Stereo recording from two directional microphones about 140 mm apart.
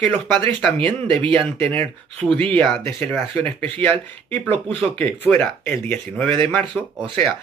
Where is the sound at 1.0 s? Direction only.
40° right (ahead or behind).